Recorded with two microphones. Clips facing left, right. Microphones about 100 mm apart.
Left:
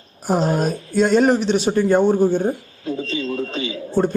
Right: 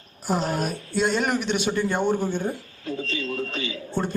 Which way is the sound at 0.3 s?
45° left (ahead or behind).